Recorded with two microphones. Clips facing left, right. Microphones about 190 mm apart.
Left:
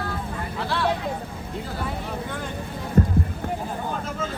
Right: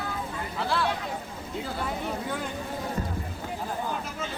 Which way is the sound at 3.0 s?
55° left (ahead or behind).